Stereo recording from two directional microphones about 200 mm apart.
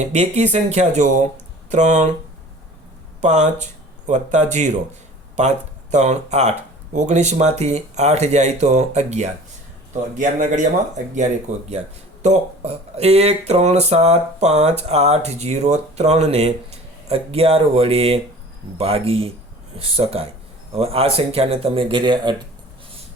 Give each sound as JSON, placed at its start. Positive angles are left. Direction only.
{"t": 0.0, "sound": "speech", "side_deg": -35}
{"t": 3.2, "sound": "speech", "side_deg": -35}